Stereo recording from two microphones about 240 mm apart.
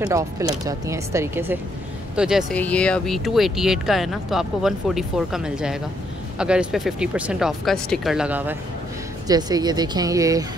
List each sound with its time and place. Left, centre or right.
0.0 s speech: centre